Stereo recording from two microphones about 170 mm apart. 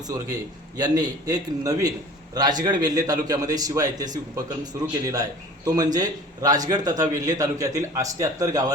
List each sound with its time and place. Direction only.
0.8 s a man's voice: 25° right (ahead or behind)